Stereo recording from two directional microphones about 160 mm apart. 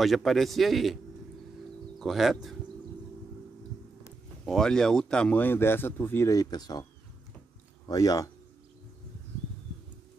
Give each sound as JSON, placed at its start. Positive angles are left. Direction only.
{"t": 0.0, "sound": "speech", "side_deg": 0}
{"t": 2.0, "sound": "speech", "side_deg": 0}
{"t": 4.5, "sound": "speech", "side_deg": 5}